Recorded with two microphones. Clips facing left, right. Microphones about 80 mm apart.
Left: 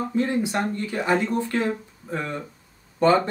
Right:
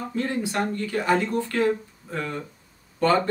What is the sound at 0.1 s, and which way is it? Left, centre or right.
Speech, left.